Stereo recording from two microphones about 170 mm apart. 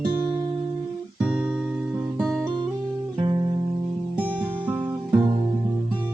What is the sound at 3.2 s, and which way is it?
Music, 30° right (ahead or behind).